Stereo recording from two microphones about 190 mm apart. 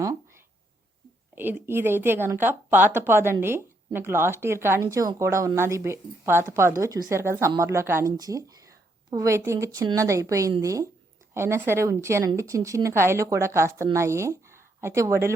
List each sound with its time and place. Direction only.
1.4 s a woman's voice: 10° right (ahead or behind)